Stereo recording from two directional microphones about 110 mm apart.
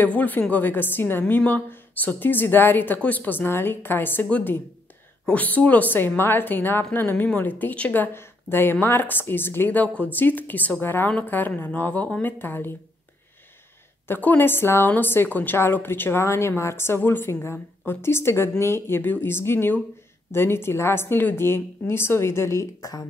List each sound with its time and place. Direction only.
0.0 s a woman's voice: 15° left (ahead or behind)
14.0 s a woman's voice: 20° left (ahead or behind)